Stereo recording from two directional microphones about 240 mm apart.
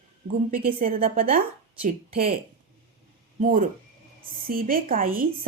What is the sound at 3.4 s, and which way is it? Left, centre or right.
A woman's voice, right.